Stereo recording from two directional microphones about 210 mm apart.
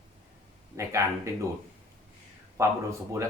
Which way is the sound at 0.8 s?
15° right (ahead or behind).